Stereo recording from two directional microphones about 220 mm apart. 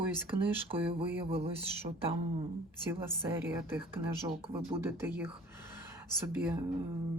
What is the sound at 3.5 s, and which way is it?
Speech, 10° right (ahead or behind).